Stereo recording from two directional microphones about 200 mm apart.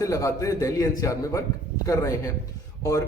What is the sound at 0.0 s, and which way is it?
A man's voice, 15° left (ahead or behind).